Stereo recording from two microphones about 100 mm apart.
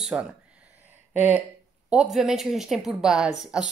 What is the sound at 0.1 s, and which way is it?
A woman's voice, 5° right (ahead or behind).